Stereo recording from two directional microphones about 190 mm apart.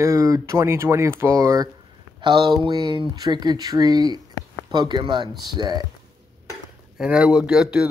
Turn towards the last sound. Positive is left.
turn(degrees=-5)  # may be behind; listen again after turning